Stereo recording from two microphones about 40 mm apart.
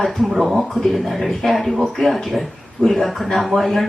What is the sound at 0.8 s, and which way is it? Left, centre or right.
Speech, centre.